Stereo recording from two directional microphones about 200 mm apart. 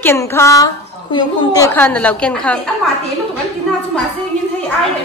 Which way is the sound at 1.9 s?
5° left (ahead or behind).